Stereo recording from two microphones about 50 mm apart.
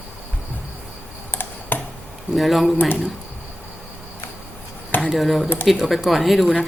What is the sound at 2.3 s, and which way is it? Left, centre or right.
Speech, centre.